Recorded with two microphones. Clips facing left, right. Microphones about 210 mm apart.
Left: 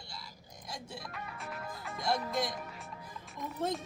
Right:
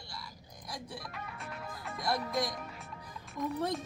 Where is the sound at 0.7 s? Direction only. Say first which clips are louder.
Right 1 dB; 25° left (ahead or behind).